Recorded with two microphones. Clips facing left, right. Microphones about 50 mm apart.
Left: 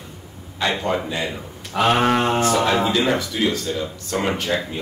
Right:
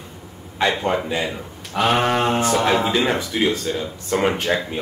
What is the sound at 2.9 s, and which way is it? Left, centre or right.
A man's voice, right.